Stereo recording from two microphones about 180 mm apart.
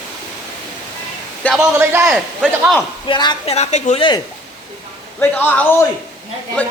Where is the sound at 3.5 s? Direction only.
35° left (ahead or behind).